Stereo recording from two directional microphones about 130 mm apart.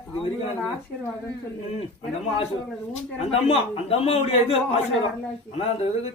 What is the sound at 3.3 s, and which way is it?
A man's voice, 50° left (ahead or behind).